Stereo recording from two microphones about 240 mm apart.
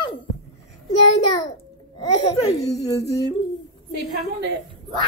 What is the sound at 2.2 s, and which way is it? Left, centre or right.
Speech, left.